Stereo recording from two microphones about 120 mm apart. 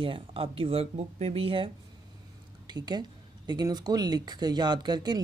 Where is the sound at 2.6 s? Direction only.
35° right (ahead or behind).